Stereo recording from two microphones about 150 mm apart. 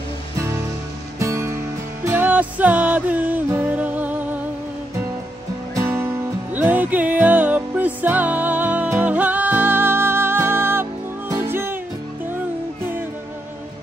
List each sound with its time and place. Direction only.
1.2 s music: 20° right (ahead or behind)
5.8 s music: 20° right (ahead or behind)